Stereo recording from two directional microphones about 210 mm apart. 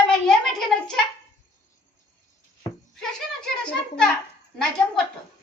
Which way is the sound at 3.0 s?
5° left (ahead or behind).